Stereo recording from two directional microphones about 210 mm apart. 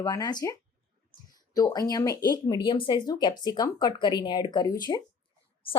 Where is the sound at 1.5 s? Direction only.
15° left (ahead or behind).